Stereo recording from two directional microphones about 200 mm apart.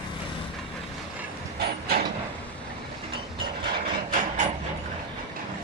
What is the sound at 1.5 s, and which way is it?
Train, 50° right (ahead or behind).